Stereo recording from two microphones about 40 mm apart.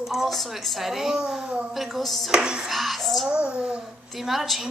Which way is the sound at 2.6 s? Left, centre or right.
Centre.